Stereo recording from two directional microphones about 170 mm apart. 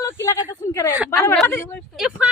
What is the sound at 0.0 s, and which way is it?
Speech, 15° left (ahead or behind).